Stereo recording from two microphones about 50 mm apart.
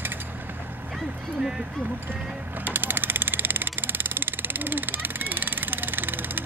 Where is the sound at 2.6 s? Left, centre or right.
Right.